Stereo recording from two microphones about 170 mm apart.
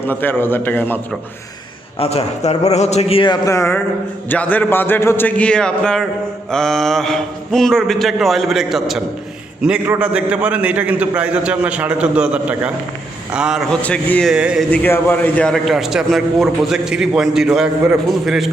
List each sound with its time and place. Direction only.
0.1 s a man's voice: 10° left (ahead or behind)
2.0 s a man's voice: 40° left (ahead or behind)
3.4 s a man's voice: 15° left (ahead or behind); by 14.6 s 5° right (ahead or behind)
14.7 s a man's voice: 10° left (ahead or behind)